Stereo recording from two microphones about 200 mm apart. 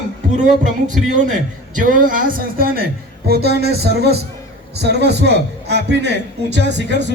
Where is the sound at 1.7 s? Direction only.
40° right (ahead or behind).